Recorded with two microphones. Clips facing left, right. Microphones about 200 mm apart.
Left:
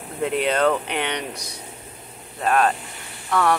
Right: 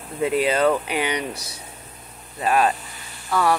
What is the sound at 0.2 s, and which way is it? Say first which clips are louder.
Speech: right 1 dB; 5° right (ahead or behind).